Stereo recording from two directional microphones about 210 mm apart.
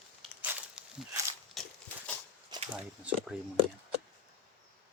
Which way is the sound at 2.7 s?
5° right (ahead or behind).